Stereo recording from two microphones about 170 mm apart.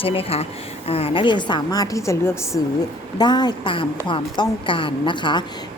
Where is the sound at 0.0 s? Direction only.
35° left (ahead or behind).